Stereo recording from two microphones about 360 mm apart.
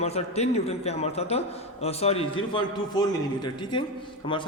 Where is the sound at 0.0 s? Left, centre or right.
Centre.